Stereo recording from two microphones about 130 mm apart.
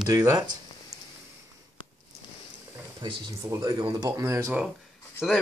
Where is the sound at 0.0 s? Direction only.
25° right (ahead or behind).